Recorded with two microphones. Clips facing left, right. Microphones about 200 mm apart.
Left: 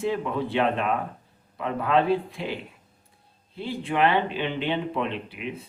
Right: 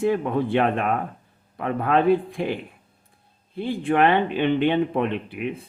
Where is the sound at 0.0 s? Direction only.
55° right (ahead or behind).